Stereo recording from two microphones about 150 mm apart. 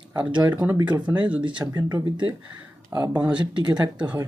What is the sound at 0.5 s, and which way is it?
Speech, 10° right (ahead or behind).